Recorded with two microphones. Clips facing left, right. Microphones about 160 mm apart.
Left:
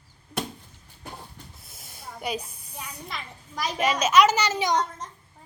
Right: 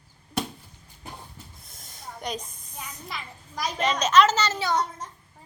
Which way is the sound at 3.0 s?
Centre (ahead or behind).